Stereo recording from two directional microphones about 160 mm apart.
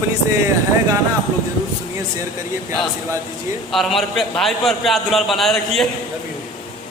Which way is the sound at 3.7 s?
Centre (ahead or behind).